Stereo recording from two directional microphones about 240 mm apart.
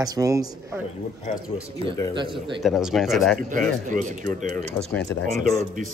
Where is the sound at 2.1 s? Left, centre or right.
Centre.